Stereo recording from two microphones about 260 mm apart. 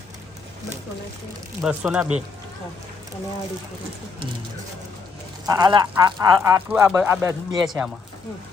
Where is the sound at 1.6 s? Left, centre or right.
Centre.